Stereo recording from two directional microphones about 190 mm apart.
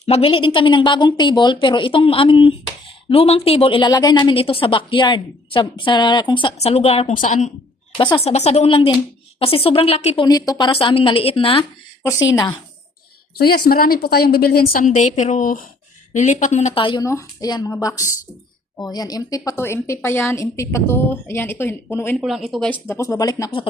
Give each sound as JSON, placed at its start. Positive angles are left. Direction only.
{"t": 0.0, "sound": "a woman's voice", "side_deg": 30}
{"t": 7.1, "sound": "a woman's voice", "side_deg": 40}
{"t": 7.9, "sound": "a woman's voice", "side_deg": 25}
{"t": 10.2, "sound": "a woman's voice", "side_deg": 20}
{"t": 12.3, "sound": "speech", "side_deg": 20}
{"t": 13.4, "sound": "a woman's voice", "side_deg": 55}
{"t": 22.2, "sound": "speech", "side_deg": 0}